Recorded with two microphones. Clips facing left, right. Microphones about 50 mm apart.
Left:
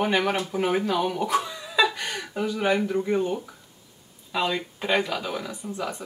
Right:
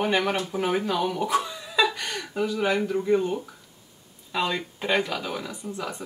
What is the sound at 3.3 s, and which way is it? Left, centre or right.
Speech, centre.